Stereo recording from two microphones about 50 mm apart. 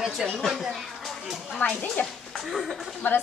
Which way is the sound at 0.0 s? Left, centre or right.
Centre.